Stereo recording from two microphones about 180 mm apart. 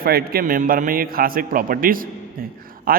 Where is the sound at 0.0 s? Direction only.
55° right (ahead or behind).